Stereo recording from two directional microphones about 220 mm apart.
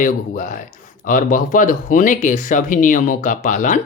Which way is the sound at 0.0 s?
35° left (ahead or behind).